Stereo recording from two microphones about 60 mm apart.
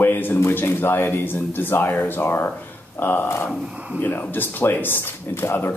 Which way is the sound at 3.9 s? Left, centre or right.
Left.